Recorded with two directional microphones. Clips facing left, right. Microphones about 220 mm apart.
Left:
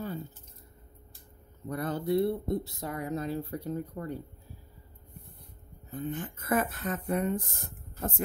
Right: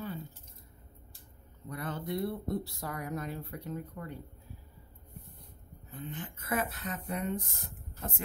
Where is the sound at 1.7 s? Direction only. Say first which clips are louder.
Left 8 dB; 40° left (ahead or behind).